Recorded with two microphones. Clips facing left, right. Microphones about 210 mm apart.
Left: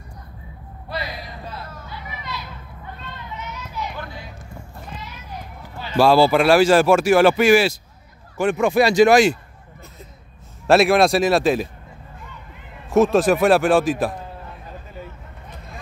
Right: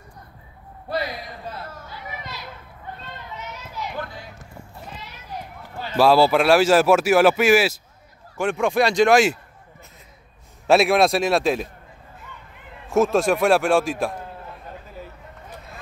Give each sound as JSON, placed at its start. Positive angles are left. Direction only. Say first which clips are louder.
{"t": 0.8, "sound": "a sound", "louder": "right 3 dB", "side_deg": -45}
{"t": 5.9, "sound": "speech", "louder": "left 1 dB", "side_deg": 0}
{"t": 10.7, "sound": "speech", "louder": "left 2 dB", "side_deg": 0}
{"t": 12.9, "sound": "speech", "louder": "left 3 dB", "side_deg": 0}